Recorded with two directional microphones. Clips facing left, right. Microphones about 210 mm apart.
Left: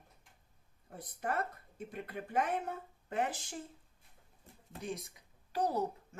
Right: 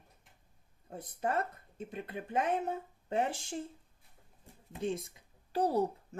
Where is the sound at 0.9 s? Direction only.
25° right (ahead or behind).